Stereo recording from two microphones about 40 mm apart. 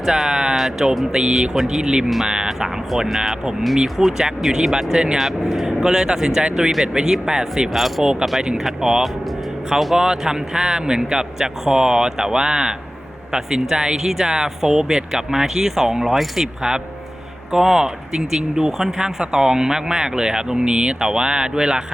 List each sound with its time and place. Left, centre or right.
0.0 s speech: centre
7.7 s speech: centre
8.5 s speech: centre
10.0 s speech: centre
17.5 s speech: centre